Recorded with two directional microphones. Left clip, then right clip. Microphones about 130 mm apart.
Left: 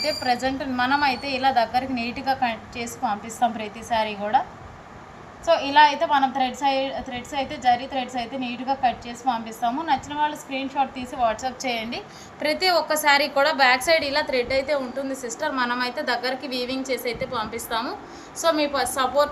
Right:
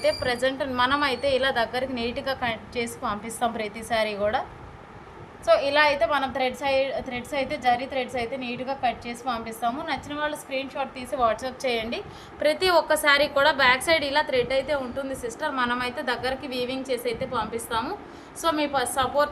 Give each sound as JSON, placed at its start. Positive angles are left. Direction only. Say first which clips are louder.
{"t": 0.0, "sound": "a woman's voice", "louder": "even", "side_deg": -55}
{"t": 5.5, "sound": "a woman's voice", "louder": "left 3 dB", "side_deg": -85}